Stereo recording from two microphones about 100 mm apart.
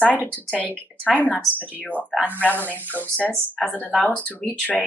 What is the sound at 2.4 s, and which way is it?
A woman's voice, 15° left (ahead or behind).